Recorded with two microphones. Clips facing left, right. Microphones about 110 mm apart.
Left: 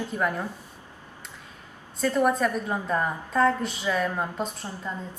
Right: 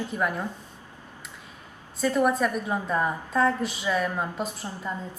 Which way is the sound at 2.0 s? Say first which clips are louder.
Even; 10° right (ahead or behind).